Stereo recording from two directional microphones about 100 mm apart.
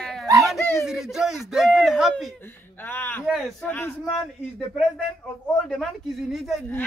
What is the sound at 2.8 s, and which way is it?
Speech, 20° left (ahead or behind).